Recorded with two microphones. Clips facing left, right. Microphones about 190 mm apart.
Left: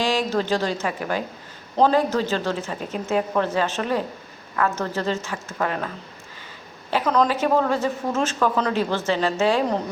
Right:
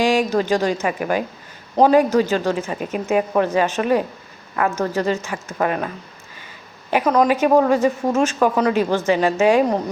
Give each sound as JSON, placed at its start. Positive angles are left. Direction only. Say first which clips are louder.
{"t": 0.0, "sound": "speech", "louder": "right 5 dB", "side_deg": -15}
{"t": 6.9, "sound": "speech", "louder": "right 4 dB", "side_deg": -15}